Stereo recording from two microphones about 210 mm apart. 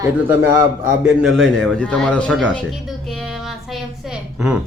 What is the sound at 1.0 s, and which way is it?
A man's voice, centre (ahead or behind).